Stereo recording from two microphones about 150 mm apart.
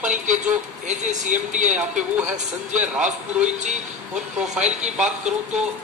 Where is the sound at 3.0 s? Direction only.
50° right (ahead or behind).